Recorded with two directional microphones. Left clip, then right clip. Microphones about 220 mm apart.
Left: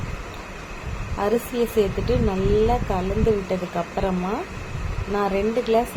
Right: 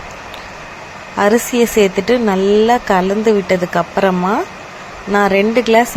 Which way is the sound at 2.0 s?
20° right (ahead or behind).